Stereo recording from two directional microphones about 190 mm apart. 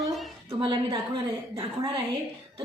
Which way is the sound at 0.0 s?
Centre (ahead or behind).